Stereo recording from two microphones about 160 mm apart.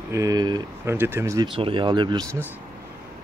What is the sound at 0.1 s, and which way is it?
Speech, 20° right (ahead or behind).